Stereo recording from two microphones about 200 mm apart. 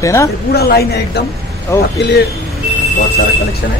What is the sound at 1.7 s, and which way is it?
Speech, 10° left (ahead or behind).